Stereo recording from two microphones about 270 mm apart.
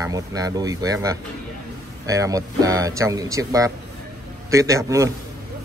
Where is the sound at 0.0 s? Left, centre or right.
Centre.